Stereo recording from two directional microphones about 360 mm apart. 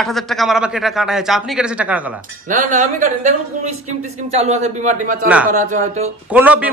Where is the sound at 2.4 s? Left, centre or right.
Right.